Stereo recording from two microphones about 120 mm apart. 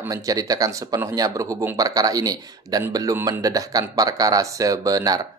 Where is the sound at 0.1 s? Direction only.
30° right (ahead or behind).